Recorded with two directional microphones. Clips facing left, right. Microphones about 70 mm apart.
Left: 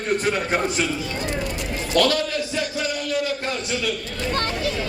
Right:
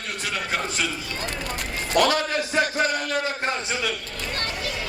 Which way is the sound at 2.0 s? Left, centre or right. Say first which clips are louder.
Even; right.